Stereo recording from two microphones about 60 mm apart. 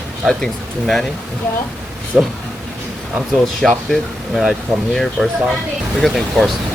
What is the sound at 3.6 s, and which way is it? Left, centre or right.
Speech, centre.